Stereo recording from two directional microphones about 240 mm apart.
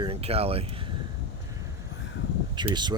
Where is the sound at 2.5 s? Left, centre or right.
Centre.